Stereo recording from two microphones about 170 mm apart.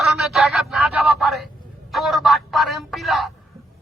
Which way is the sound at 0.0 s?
Centre (ahead or behind).